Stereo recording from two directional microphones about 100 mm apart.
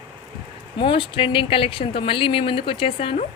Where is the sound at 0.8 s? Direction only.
65° left (ahead or behind).